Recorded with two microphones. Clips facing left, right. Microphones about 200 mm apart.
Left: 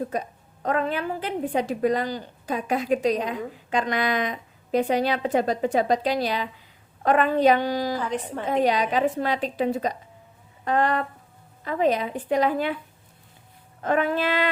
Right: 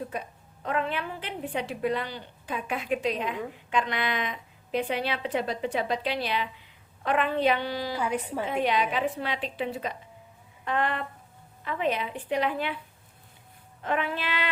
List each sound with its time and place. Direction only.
0.1 s a woman's voice: 40° left (ahead or behind)
7.9 s a woman's voice: 10° right (ahead or behind)
8.4 s a woman's voice: 40° left (ahead or behind)
13.8 s a woman's voice: 45° left (ahead or behind)